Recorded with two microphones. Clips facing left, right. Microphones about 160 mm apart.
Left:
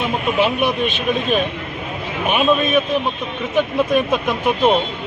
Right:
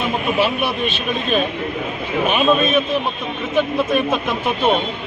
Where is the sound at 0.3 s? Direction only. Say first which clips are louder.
Left 4 dB; 15° left (ahead or behind).